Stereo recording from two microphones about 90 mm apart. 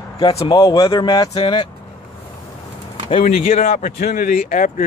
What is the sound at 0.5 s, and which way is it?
Speech, 40° left (ahead or behind).